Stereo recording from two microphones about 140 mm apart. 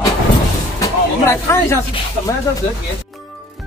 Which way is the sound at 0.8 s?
20° left (ahead or behind).